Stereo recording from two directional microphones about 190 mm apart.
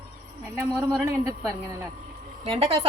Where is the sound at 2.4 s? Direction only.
30° right (ahead or behind).